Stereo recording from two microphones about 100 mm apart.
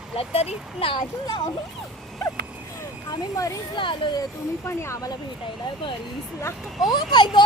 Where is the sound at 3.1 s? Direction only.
35° left (ahead or behind).